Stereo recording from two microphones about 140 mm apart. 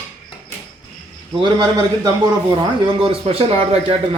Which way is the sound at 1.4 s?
30° right (ahead or behind).